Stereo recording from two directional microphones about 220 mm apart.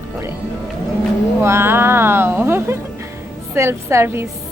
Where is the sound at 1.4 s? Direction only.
10° right (ahead or behind).